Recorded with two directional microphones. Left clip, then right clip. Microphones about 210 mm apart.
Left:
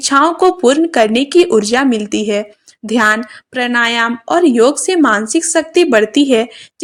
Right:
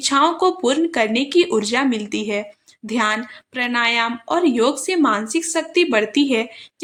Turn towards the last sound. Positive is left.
turn(degrees=25)  # may be behind; listen again after turning